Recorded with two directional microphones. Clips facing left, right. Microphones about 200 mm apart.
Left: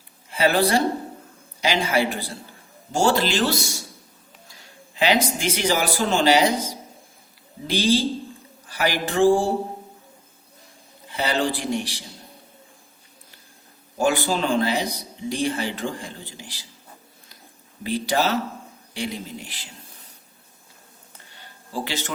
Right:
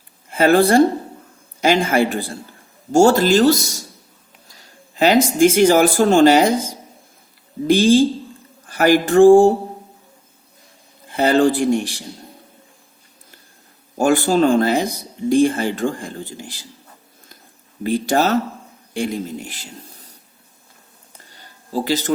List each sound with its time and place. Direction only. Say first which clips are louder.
0.3 s speech: right 6 dB; 50° right (ahead or behind)
4.9 s speech: right 8 dB; 45° right (ahead or behind)
7.7 s speech: right 8 dB; 50° right (ahead or behind)
11.1 s speech: right 9 dB; 50° right (ahead or behind)
14.0 s speech: right 7 dB; 50° right (ahead or behind)
17.8 s speech: right 5 dB; 50° right (ahead or behind)
21.2 s a sound: right 6 dB; 40° right (ahead or behind)